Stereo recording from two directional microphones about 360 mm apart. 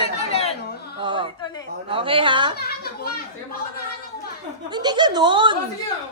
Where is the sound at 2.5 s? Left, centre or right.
Left.